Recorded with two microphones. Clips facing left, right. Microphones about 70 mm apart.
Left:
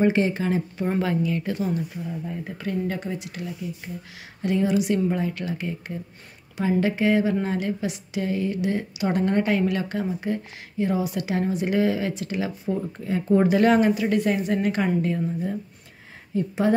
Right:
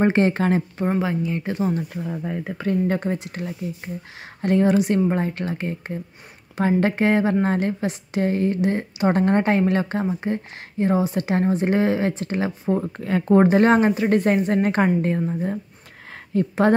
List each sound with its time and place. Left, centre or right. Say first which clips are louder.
0.0 s speech: right 3 dB; right
0.8 s speech: even; centre
2.0 s speech: right 4 dB; right
2.5 s a woman's voice: right 6 dB; right
12.7 s speech: right 4 dB; right
13.5 s a woman's voice: right 2 dB; right